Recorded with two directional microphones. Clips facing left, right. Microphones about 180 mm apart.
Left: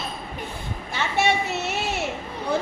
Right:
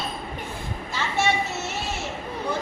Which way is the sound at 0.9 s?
65° left (ahead or behind).